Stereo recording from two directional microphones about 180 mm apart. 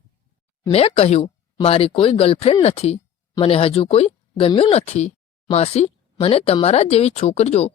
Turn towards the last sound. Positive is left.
turn(degrees=35)  # may be behind; listen again after turning